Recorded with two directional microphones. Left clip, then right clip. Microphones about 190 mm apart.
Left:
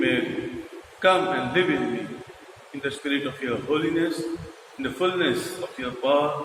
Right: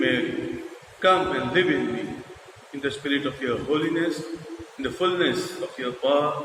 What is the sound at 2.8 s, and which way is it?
A man's voice, 40° right (ahead or behind).